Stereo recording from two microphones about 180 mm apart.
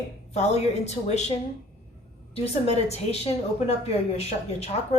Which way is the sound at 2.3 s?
35° left (ahead or behind).